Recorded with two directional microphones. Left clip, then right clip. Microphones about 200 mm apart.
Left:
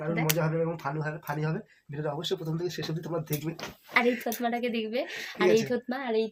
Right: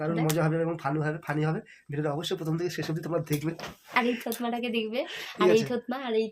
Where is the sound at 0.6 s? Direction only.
45° right (ahead or behind).